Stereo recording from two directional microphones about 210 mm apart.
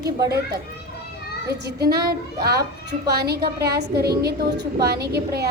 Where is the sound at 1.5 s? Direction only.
50° right (ahead or behind).